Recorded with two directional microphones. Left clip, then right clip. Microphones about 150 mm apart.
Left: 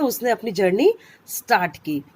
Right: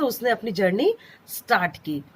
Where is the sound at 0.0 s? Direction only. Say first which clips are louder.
Left 2 dB; 30° left (ahead or behind).